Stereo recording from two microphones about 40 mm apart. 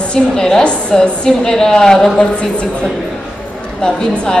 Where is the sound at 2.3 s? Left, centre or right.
Left.